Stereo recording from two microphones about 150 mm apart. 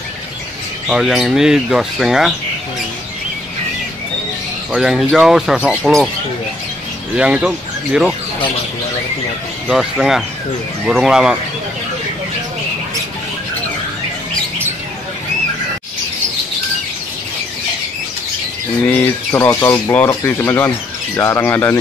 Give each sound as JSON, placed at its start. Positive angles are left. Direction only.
{"t": 0.8, "sound": "speech", "side_deg": -5}
{"t": 4.7, "sound": "speech", "side_deg": -5}
{"t": 7.2, "sound": "speech", "side_deg": -5}
{"t": 9.7, "sound": "speech", "side_deg": 0}
{"t": 18.9, "sound": "speech", "side_deg": 15}